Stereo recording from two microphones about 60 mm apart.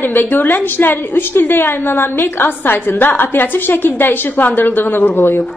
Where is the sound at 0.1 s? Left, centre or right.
Left.